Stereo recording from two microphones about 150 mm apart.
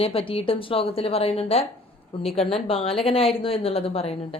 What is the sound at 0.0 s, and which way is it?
A woman's voice, 40° left (ahead or behind).